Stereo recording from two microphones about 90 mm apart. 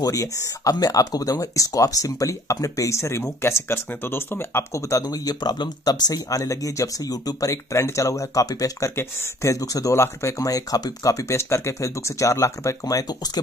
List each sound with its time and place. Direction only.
0.0 s speech: 40° left (ahead or behind)